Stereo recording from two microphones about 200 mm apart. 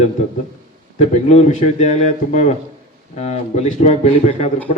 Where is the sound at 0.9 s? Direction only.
35° left (ahead or behind).